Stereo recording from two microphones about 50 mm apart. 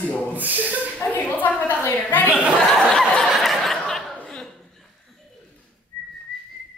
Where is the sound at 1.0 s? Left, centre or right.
Left.